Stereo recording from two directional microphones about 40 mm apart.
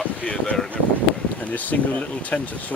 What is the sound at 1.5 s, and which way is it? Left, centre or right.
Speech, left.